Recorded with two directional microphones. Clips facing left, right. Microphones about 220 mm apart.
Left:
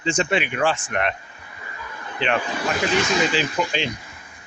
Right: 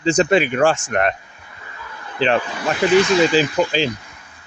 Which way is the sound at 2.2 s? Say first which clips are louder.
Right 5 dB; 35° right (ahead or behind).